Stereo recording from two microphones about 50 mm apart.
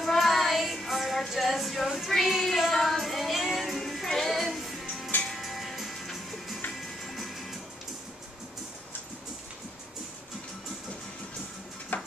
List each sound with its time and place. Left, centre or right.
0.0 s music: centre
1.9 s child singing: centre
4.5 s music: centre
11.9 s a sound: left